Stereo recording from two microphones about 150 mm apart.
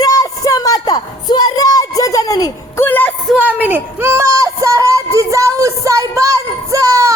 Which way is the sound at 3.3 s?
10° right (ahead or behind).